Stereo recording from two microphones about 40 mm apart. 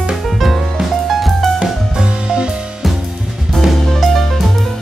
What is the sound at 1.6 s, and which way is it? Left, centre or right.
Music, centre.